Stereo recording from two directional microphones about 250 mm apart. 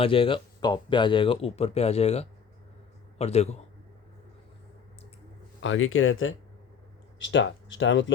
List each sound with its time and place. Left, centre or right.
0.0 s speech: left
5.6 s speech: left